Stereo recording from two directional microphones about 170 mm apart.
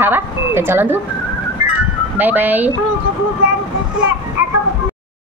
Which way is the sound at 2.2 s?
10° right (ahead or behind).